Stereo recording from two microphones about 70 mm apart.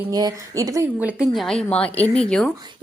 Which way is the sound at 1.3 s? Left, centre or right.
Centre.